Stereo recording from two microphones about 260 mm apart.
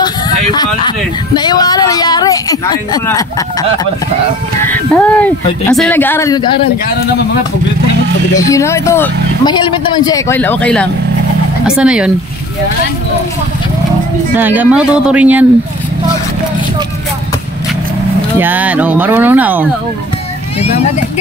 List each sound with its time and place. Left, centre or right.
0.6 s speech: centre
4.9 s speech: centre
8.4 s speech: centre
14.3 s speech: centre
18.4 s speech: centre
20.6 s speech: left